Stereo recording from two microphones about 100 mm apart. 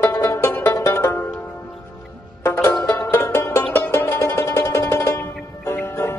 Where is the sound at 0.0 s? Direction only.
30° left (ahead or behind).